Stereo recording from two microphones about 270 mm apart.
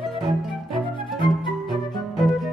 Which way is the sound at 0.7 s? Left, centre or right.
Centre.